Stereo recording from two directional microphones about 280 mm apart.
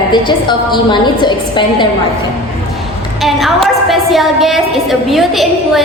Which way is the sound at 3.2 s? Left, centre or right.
Centre.